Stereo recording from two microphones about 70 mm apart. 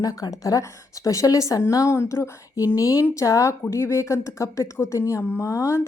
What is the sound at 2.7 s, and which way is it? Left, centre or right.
A woman's voice, left.